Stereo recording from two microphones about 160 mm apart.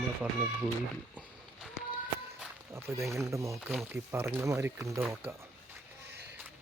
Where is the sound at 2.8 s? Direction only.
15° right (ahead or behind).